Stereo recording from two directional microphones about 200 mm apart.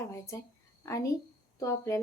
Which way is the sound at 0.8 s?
15° left (ahead or behind).